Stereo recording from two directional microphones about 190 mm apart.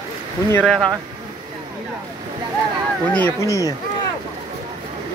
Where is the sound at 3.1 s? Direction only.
10° left (ahead or behind).